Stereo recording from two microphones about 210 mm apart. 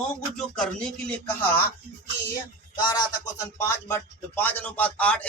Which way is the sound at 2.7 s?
20° left (ahead or behind).